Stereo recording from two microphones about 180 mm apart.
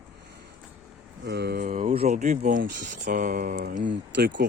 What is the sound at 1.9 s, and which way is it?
Speech, 35° right (ahead or behind).